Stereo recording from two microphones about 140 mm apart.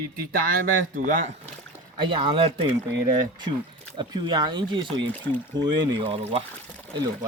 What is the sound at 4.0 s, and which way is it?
Speech, 35° right (ahead or behind).